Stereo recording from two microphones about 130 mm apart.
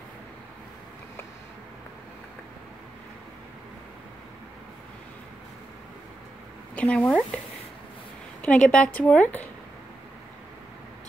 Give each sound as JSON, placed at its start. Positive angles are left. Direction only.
{"t": 6.7, "sound": "speech", "side_deg": 10}
{"t": 8.4, "sound": "a woman's voice", "side_deg": 10}